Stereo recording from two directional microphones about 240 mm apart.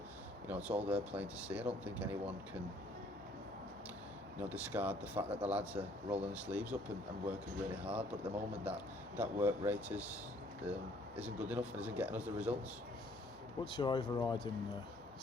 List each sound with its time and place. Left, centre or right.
0.4 s speech: centre
4.4 s speech: centre
13.7 s speech: left